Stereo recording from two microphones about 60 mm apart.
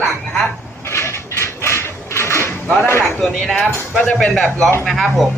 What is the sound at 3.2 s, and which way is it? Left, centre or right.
A man's voice, centre.